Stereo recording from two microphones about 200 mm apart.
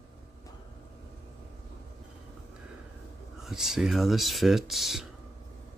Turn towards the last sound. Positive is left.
turn(degrees=0)  # may be behind; listen again after turning